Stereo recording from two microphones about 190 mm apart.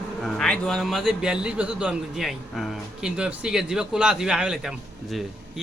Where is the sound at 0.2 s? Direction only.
5° left (ahead or behind).